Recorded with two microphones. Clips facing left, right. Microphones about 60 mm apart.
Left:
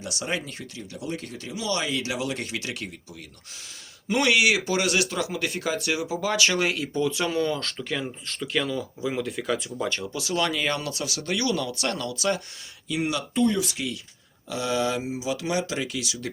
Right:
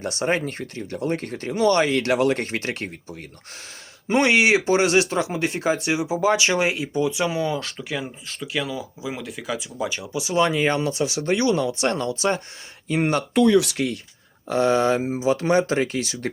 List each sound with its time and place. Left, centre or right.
0.0 s speech: right
12.9 s speech: right
13.3 s speech: right
14.5 s speech: right